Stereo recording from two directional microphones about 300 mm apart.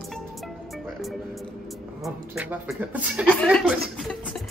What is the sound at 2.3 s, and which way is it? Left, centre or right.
Speech, centre.